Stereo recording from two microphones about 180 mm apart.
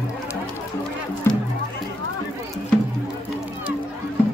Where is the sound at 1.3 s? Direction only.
15° left (ahead or behind).